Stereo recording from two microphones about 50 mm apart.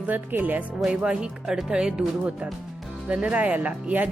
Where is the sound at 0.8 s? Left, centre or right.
Centre.